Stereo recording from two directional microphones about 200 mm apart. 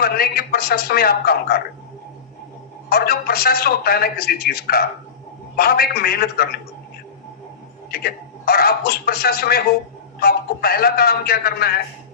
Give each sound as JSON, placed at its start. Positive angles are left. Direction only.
{"t": 0.0, "sound": "a man's voice", "side_deg": 50}
{"t": 2.9, "sound": "a man's voice", "side_deg": 50}
{"t": 7.9, "sound": "a man's voice", "side_deg": 50}